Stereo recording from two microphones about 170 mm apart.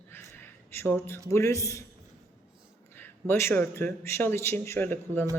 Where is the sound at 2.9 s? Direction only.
10° left (ahead or behind).